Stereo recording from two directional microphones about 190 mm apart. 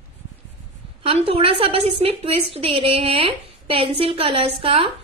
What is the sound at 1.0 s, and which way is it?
A woman's voice, 30° right (ahead or behind).